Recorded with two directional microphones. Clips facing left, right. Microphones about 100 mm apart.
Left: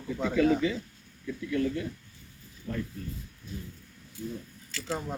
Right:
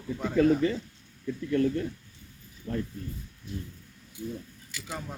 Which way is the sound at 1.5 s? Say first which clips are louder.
Right 3 dB; 45° right (ahead or behind).